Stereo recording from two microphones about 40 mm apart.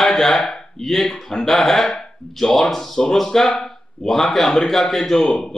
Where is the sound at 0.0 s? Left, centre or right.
Centre.